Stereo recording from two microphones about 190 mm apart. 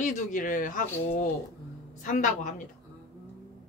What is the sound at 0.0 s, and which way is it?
A woman's voice, 45° left (ahead or behind).